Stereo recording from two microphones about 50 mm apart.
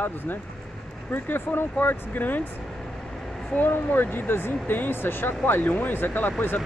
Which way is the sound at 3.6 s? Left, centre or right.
Left.